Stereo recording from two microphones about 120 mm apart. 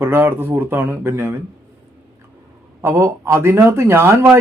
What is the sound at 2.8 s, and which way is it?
Speech, 20° right (ahead or behind).